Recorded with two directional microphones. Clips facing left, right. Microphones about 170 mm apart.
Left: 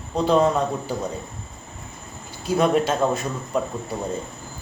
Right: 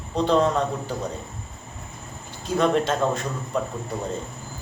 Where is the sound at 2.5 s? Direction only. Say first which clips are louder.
Left 2 dB; 10° left (ahead or behind).